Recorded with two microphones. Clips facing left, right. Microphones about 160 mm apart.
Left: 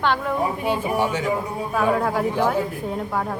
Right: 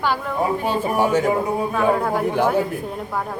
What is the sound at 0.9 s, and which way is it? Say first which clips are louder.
Speech: right 4 dB; 45° right (ahead or behind).